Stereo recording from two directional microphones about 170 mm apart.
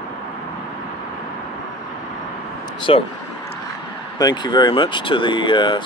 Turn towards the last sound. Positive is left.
turn(degrees=30)  # may be behind; listen again after turning